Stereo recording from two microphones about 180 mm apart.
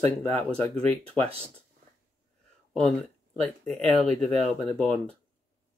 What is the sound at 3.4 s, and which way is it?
Speech, 5° left (ahead or behind).